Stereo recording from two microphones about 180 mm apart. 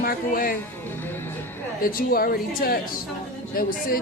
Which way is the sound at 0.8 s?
10° left (ahead or behind).